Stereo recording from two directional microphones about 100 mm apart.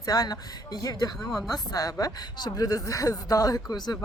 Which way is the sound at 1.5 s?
40° left (ahead or behind).